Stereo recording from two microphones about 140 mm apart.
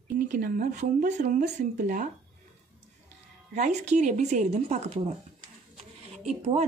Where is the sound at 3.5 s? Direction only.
55° right (ahead or behind).